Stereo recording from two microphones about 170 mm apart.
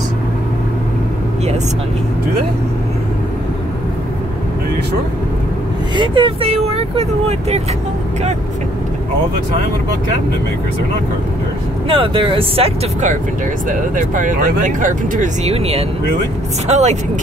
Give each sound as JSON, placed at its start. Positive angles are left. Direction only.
{"t": 5.9, "sound": "speech", "side_deg": -30}
{"t": 11.9, "sound": "speech", "side_deg": -30}
{"t": 13.7, "sound": "speech", "side_deg": -50}
{"t": 15.5, "sound": "speech", "side_deg": -35}